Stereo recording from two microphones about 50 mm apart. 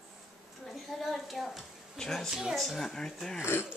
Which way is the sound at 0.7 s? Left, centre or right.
Centre.